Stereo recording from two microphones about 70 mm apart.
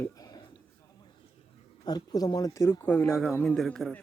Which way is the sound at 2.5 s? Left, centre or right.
Left.